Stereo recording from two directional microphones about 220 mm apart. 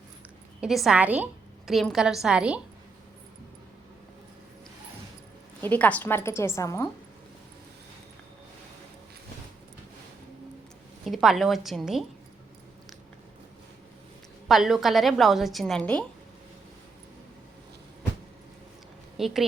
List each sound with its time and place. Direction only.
0.6 s a woman's voice: centre (ahead or behind)
5.6 s a woman's voice: 5° left (ahead or behind)
11.0 s a woman's voice: centre (ahead or behind)
14.4 s a woman's voice: centre (ahead or behind)
19.1 s speech: centre (ahead or behind)